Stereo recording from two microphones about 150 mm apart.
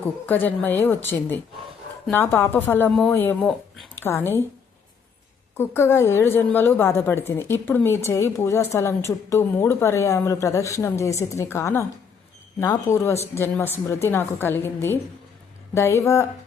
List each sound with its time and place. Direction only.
0.3 s a woman's voice: 10° left (ahead or behind)
5.5 s a woman's voice: 15° left (ahead or behind)